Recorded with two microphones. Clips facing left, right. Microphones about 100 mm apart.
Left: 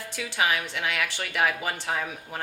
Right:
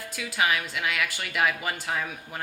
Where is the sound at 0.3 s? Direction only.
25° left (ahead or behind).